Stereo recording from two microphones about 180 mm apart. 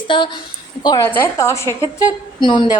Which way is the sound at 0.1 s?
25° left (ahead or behind).